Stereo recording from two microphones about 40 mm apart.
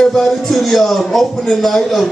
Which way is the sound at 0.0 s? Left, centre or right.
Centre.